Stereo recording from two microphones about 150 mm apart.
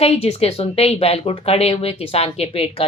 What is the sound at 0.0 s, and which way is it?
Speech, 45° left (ahead or behind).